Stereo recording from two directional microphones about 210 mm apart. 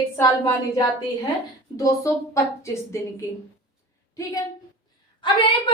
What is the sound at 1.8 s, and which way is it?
A woman's voice, 15° left (ahead or behind).